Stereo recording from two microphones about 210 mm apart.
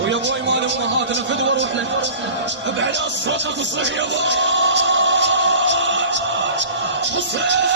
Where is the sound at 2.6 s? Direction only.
60° right (ahead or behind).